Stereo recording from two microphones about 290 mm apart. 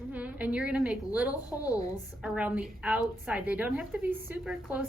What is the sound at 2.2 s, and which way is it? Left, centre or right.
A woman's voice, centre.